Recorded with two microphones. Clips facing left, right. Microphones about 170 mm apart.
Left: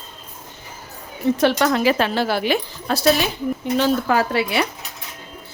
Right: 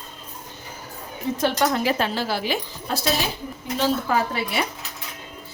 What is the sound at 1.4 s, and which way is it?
Speech, 85° left.